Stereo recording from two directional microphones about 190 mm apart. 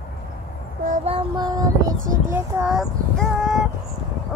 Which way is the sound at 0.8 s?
45° right (ahead or behind).